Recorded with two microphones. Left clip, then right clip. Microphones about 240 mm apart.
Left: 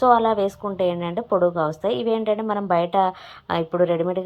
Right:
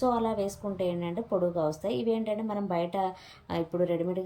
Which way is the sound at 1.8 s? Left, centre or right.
Centre.